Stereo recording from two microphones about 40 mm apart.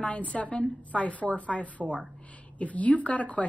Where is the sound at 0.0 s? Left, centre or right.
Left.